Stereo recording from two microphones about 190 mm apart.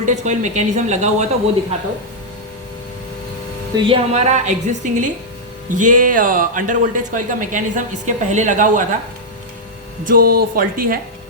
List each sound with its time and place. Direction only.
0.0 s a woman's voice: 40° right (ahead or behind)
3.8 s a woman's voice: 30° right (ahead or behind)
10.0 s speech: 45° right (ahead or behind)